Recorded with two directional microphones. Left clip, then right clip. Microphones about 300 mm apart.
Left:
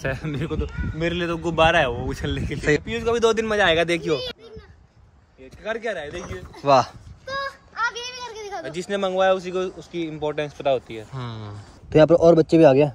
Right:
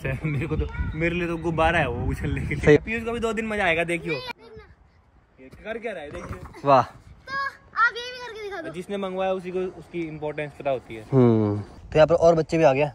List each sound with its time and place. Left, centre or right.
0.0 s a man's voice: centre
5.6 s speech: centre
6.1 s a man's voice: centre
8.6 s a man's voice: left
11.1 s speech: centre
11.9 s speech: centre